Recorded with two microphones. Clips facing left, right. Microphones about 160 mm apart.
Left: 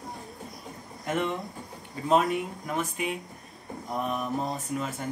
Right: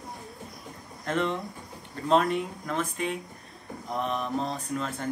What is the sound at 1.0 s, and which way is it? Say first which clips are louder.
Speech: right 1 dB; 10° left (ahead or behind).